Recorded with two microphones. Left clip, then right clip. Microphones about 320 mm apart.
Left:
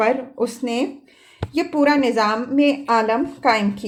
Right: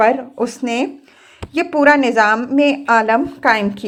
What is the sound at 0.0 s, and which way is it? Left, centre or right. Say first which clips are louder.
Speech: right 5 dB; centre.